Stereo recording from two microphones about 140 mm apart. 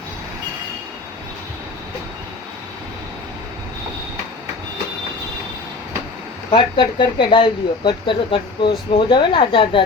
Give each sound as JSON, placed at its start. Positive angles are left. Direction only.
{"t": 6.5, "sound": "speech", "side_deg": 35}